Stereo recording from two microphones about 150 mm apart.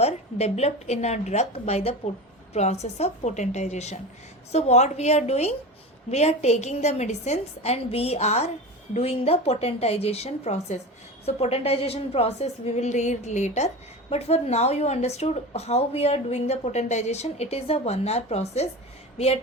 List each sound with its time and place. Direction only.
0.0 s speech: 45° left (ahead or behind)